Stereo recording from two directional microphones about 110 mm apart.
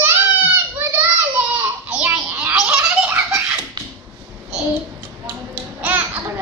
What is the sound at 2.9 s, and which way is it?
Giggle, 15° right (ahead or behind).